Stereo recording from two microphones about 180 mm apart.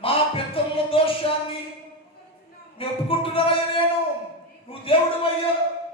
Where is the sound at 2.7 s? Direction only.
30° left (ahead or behind).